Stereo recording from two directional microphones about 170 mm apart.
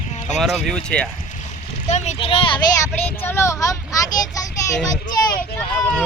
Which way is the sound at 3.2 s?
15° left (ahead or behind).